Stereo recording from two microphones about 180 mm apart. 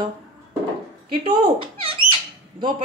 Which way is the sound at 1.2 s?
30° right (ahead or behind).